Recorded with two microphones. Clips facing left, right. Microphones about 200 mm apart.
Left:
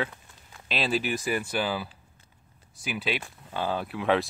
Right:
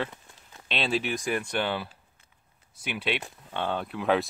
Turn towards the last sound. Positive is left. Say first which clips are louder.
# even
turn(degrees=0)  # may be behind; listen again after turning